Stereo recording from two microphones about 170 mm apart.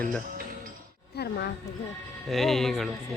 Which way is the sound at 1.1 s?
70° left (ahead or behind).